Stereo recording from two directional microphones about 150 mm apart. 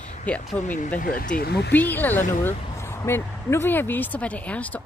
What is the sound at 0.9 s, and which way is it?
Speech, 65° left (ahead or behind).